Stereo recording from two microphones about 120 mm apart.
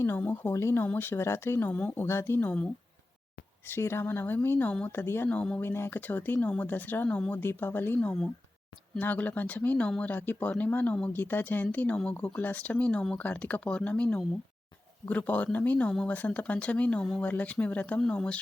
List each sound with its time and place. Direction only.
0.0 s speech: 15° left (ahead or behind)
3.7 s speech: 20° left (ahead or behind)